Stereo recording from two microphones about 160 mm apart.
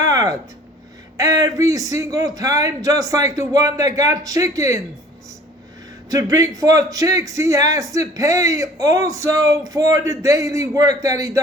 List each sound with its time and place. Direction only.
0.0 s a sound: 20° right (ahead or behind)
1.1 s a man's voice: 20° right (ahead or behind)
6.1 s a man's voice: 20° right (ahead or behind)